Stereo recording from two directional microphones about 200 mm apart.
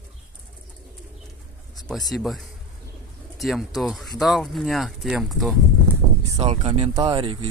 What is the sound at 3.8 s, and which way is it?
Speech, centre (ahead or behind).